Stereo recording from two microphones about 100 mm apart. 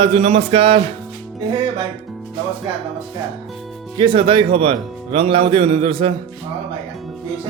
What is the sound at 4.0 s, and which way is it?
Speech, 60° right (ahead or behind).